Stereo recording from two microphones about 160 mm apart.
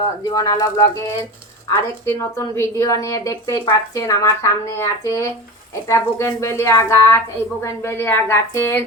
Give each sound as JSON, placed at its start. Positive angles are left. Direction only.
{"t": 0.3, "sound": "a woman's voice", "side_deg": 25}